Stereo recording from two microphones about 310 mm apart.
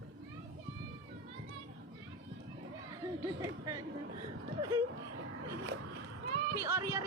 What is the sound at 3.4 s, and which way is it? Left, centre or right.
Speech, centre.